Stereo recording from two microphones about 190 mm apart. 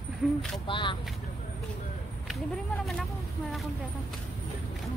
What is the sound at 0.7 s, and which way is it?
Speech, 25° left (ahead or behind).